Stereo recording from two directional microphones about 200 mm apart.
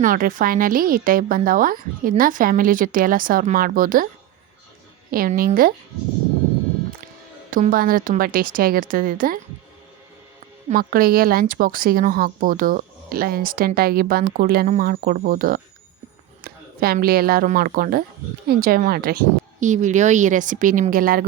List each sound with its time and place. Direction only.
0.0 s speech: 40° right (ahead or behind)
5.1 s speech: 45° right (ahead or behind)
7.5 s speech: 45° right (ahead or behind)
10.7 s speech: 45° right (ahead or behind)